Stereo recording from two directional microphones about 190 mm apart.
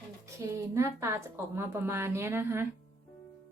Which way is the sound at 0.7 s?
15° right (ahead or behind).